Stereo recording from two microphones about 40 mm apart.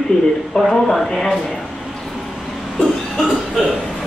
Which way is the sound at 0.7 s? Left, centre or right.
Centre.